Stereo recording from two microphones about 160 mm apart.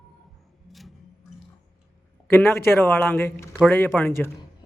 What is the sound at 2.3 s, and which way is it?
Speech, 15° left (ahead or behind).